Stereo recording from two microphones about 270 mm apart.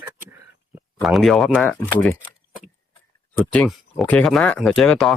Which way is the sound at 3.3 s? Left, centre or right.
Centre.